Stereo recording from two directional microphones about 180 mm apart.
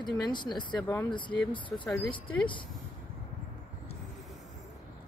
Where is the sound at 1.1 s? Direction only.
25° left (ahead or behind).